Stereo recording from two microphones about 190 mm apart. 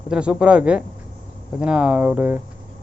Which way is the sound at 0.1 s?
5° right (ahead or behind).